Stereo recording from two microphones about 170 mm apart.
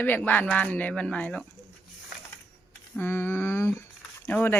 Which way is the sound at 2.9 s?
15° left (ahead or behind).